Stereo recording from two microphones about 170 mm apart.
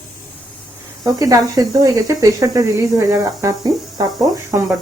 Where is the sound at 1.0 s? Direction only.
20° right (ahead or behind).